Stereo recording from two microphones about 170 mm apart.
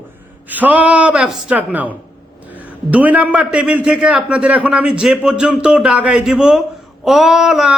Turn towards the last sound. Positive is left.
turn(degrees=-5)  # may be behind; listen again after turning